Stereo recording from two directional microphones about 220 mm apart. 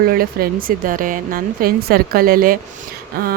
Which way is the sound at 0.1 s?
40° right (ahead or behind).